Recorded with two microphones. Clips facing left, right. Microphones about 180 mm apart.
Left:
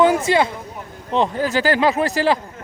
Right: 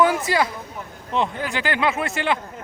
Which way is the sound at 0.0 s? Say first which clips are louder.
Left 4 dB; 25° left (ahead or behind).